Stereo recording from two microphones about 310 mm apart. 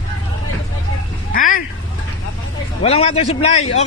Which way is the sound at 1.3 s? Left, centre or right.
Left.